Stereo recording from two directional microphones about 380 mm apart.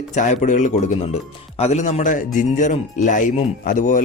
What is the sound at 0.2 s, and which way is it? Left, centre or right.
Speech, centre.